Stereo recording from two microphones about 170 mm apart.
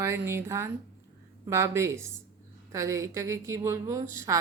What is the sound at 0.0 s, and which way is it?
A woman's voice, 15° right (ahead or behind).